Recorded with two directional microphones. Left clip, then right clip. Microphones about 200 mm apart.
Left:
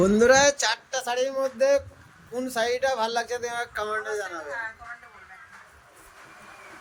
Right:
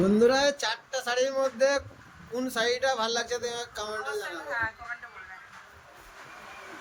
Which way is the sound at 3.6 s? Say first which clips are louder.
Left 6 dB; 25° left (ahead or behind).